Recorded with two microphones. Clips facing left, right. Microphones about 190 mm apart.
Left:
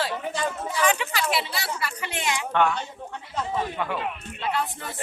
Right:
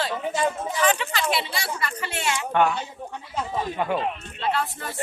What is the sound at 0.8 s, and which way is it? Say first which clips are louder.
Speech: right 1 dB; 10° left (ahead or behind).